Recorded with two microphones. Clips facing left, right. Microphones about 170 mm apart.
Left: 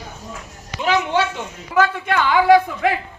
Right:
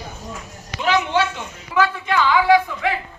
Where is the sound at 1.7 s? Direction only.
50° left (ahead or behind).